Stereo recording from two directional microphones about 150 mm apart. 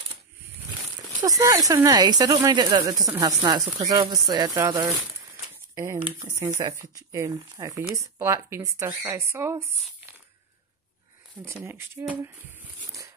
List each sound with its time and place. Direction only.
1.2 s speech: 25° right (ahead or behind)
6.4 s speech: 20° right (ahead or behind)
11.4 s speech: 15° right (ahead or behind)